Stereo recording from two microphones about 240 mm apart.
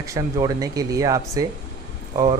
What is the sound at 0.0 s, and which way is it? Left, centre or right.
A man's voice, centre.